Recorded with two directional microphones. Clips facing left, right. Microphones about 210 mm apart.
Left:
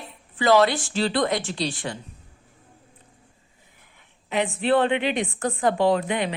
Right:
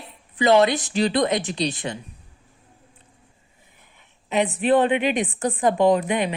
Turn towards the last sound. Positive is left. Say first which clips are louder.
# right 3 dB
turn(degrees=-20)  # may be behind; listen again after turning